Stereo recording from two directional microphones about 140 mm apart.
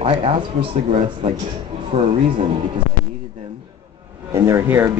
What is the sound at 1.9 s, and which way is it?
Speech, 50° right (ahead or behind).